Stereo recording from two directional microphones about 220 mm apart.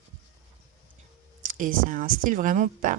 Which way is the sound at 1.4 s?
40° right (ahead or behind).